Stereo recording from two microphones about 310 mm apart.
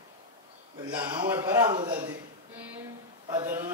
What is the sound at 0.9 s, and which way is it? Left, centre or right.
A man's voice, centre.